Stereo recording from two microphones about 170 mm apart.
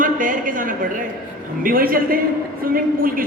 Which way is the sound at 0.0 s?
50° right (ahead or behind).